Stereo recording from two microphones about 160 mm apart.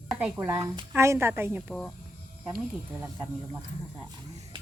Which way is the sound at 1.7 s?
5° left (ahead or behind).